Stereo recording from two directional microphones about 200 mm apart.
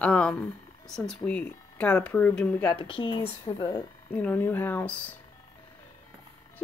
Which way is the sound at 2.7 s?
25° left (ahead or behind).